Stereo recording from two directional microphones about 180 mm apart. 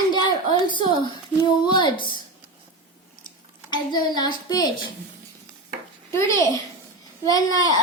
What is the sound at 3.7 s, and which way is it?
Speech, 25° left (ahead or behind).